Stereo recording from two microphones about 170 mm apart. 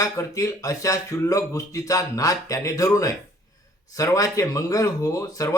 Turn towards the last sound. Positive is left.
turn(degrees=20)  # may be behind; listen again after turning